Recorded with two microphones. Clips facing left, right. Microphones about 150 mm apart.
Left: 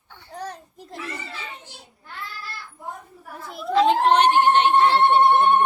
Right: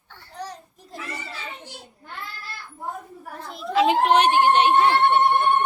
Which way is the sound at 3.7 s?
10° right (ahead or behind).